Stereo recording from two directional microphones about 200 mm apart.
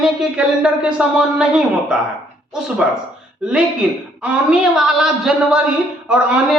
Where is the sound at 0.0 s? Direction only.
5° right (ahead or behind).